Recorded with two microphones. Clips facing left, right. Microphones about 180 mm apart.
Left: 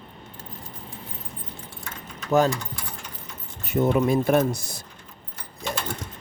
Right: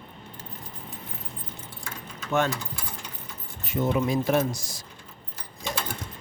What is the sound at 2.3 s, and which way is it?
Speech, 40° left (ahead or behind).